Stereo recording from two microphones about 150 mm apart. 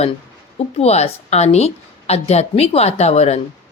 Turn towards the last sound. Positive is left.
turn(degrees=45)  # may be behind; listen again after turning